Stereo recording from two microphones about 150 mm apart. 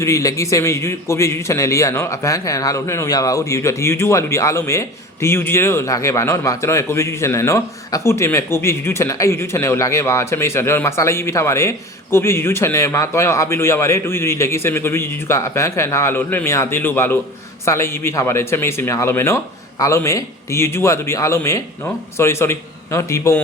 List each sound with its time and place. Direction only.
0.0 s a man's voice: 20° left (ahead or behind)